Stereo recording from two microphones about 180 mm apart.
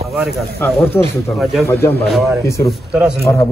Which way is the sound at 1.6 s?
15° left (ahead or behind).